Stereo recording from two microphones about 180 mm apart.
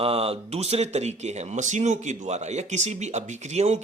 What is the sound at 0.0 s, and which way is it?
Speech, 35° right (ahead or behind).